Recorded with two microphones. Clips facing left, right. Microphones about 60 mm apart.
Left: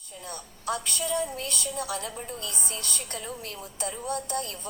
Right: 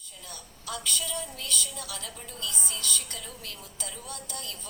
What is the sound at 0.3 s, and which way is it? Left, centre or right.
A woman's voice, left.